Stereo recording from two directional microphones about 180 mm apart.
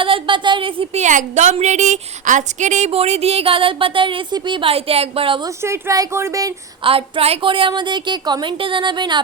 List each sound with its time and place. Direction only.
0.0 s a woman's voice: 30° right (ahead or behind)
1.0 s a woman's voice: 40° right (ahead or behind)
5.6 s speech: 15° right (ahead or behind)
6.8 s a woman's voice: 30° right (ahead or behind)